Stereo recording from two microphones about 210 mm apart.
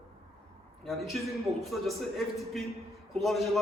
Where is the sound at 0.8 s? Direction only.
Centre (ahead or behind).